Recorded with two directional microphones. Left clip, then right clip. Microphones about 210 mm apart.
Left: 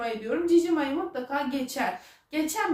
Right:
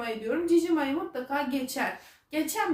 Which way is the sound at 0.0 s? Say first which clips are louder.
Left 2 dB; 20° right (ahead or behind).